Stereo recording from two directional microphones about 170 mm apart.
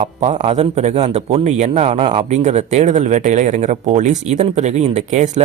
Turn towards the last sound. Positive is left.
turn(degrees=-45)  # may be behind; listen again after turning